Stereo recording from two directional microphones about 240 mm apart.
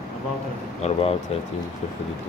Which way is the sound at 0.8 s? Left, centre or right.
Left.